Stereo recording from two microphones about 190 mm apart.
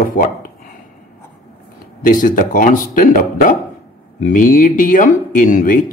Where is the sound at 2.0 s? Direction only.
45° left (ahead or behind).